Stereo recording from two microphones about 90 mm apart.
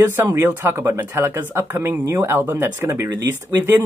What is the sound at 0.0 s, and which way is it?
Speech, 25° right (ahead or behind).